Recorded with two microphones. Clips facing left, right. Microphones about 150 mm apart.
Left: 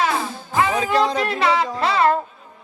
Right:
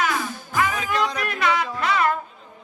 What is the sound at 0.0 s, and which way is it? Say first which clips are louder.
Music: left 3 dB; 30° left (ahead or behind).